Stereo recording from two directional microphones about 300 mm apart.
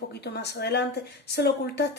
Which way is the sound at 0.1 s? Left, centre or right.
Left.